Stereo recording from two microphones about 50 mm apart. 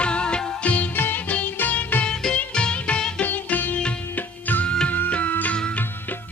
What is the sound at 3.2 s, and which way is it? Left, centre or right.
Music, left.